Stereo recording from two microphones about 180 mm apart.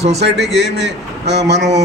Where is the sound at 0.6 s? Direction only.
75° right (ahead or behind).